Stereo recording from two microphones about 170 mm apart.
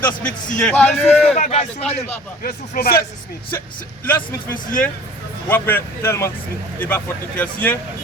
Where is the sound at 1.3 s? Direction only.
40° left (ahead or behind).